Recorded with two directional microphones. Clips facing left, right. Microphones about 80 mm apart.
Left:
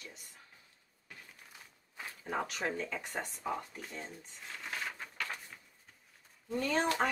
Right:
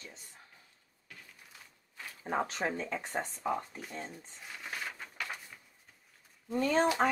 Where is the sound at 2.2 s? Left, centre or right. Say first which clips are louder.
Right 3 dB; right.